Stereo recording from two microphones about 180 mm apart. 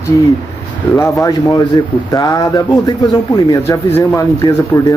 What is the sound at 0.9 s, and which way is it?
Speech, 15° left (ahead or behind).